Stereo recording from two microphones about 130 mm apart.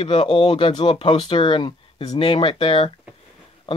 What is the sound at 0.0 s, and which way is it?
Speech, 40° left (ahead or behind).